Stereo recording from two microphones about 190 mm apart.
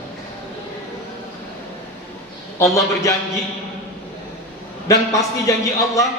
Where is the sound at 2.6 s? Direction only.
15° left (ahead or behind).